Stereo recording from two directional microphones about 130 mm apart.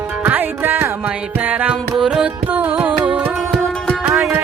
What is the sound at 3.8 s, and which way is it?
Music, 5° left (ahead or behind).